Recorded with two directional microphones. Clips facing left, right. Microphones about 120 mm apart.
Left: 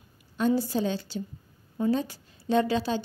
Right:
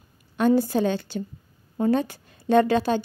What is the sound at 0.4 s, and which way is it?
A woman's voice, 60° right (ahead or behind).